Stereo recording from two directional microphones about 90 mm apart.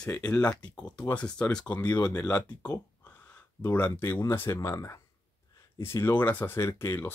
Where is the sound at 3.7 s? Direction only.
20° left (ahead or behind).